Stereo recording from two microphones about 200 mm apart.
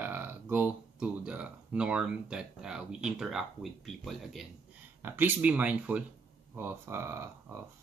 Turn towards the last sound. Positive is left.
turn(degrees=-10)  # may be behind; listen again after turning